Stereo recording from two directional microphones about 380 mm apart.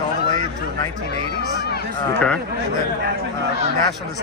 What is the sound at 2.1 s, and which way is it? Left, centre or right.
Speech, centre.